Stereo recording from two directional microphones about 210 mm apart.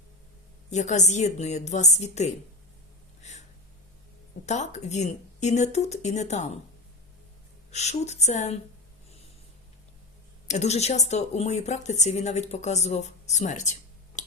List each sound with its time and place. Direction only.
0.7 s speech: 35° left (ahead or behind)
3.2 s a sound: 35° left (ahead or behind)
4.4 s speech: 35° left (ahead or behind)
7.7 s speech: 30° left (ahead or behind)
10.4 s speech: 35° left (ahead or behind)
14.2 s a sound: 35° left (ahead or behind)